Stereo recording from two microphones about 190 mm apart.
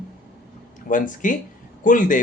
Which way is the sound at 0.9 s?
45° left (ahead or behind).